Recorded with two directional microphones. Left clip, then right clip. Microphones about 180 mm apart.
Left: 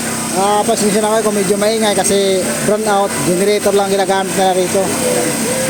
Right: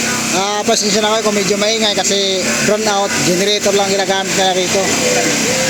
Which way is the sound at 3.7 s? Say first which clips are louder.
Left 1 dB; 25° left (ahead or behind).